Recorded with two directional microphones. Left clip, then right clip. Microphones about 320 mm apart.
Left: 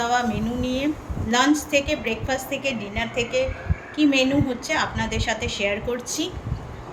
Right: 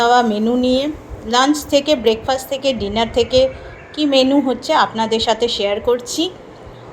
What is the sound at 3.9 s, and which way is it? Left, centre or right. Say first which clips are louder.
A woman's voice: right 6 dB; centre.